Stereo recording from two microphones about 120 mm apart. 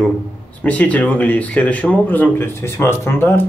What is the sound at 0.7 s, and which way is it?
Speech, 10° left (ahead or behind).